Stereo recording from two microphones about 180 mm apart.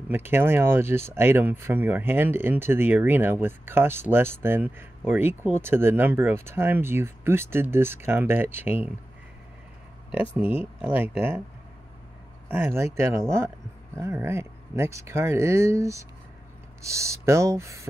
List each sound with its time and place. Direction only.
0.1 s speech: 10° right (ahead or behind)
10.3 s speech: 10° right (ahead or behind)
12.4 s speech: 10° right (ahead or behind)